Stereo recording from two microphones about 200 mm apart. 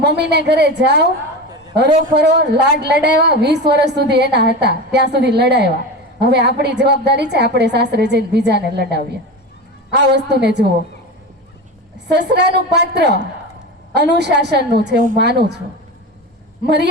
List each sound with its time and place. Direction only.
0.0 s a woman's voice: 55° right (ahead or behind)
11.9 s a woman's voice: 60° right (ahead or behind)
16.6 s a woman's voice: 60° right (ahead or behind)